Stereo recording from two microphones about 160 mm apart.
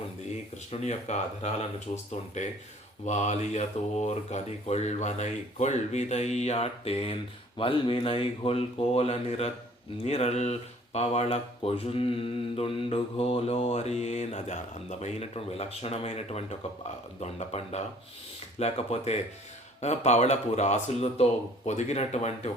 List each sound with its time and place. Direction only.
0.7 s speech: 45° left (ahead or behind)